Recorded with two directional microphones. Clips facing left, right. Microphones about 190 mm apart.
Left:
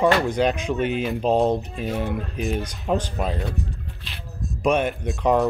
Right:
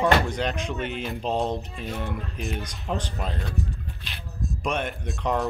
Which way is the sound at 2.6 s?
35° left (ahead or behind).